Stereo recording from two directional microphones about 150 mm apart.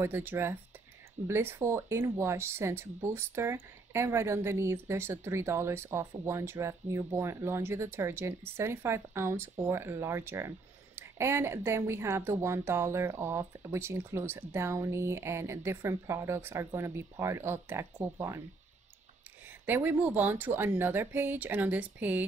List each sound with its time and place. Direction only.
0.0 s speech: 15° right (ahead or behind)
19.6 s speech: 10° right (ahead or behind)